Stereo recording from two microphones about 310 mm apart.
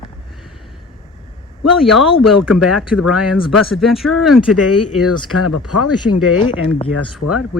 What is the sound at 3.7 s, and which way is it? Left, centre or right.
Speech, centre.